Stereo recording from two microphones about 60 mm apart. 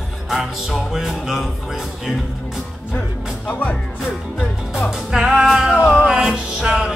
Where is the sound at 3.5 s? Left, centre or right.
Left.